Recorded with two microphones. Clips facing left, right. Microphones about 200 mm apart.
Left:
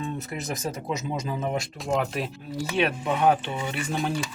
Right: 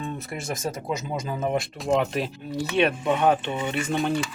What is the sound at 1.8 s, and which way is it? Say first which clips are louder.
Speech: right 3 dB; centre (ahead or behind).